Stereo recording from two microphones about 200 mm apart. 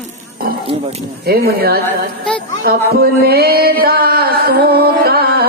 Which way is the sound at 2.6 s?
50° right (ahead or behind).